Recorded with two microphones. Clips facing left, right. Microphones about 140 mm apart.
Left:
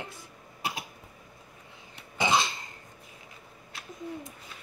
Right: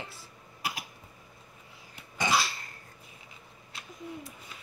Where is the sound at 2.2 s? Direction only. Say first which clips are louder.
Left 2 dB; 20° left (ahead or behind).